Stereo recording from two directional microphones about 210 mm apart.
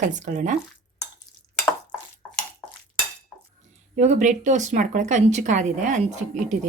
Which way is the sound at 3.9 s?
35° right (ahead or behind).